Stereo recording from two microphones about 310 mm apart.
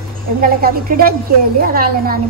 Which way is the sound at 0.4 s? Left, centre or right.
Right.